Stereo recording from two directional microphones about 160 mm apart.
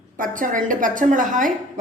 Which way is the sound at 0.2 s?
55° right (ahead or behind).